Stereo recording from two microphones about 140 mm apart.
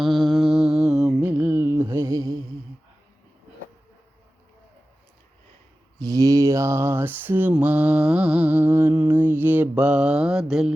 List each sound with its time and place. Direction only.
0.0 s mantra: centre (ahead or behind); by 2.4 s 25° right (ahead or behind)
6.0 s mantra: 25° right (ahead or behind); by 10.7 s 5° right (ahead or behind)